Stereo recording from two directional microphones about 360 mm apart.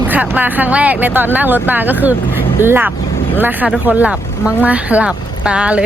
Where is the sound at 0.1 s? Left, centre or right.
Centre.